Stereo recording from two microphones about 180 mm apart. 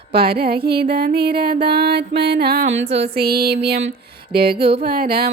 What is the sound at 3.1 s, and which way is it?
Music, 60° right (ahead or behind).